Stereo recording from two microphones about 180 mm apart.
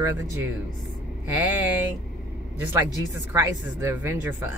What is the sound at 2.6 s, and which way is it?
Speech, 10° right (ahead or behind).